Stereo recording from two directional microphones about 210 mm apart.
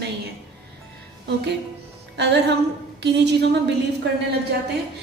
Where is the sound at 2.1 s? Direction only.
55° right (ahead or behind).